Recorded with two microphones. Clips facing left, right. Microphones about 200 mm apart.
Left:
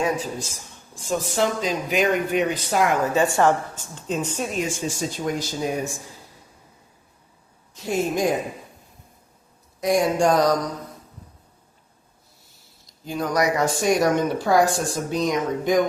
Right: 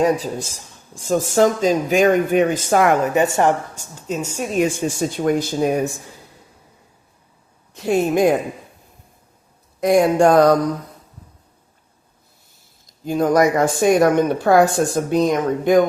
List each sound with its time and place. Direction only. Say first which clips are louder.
0.9 s speech: right 7 dB; 45° right (ahead or behind)
3.0 s a woman's voice: right 2 dB; 20° right (ahead or behind)
3.8 s a woman's voice: right 1 dB; 10° right (ahead or behind)
4.7 s speech: right 5 dB; 55° right (ahead or behind)
7.7 s speech: right 6 dB; 60° right (ahead or behind)
9.8 s speech: right 6 dB; 60° right (ahead or behind)
13.1 s speech: right 7 dB; 50° right (ahead or behind)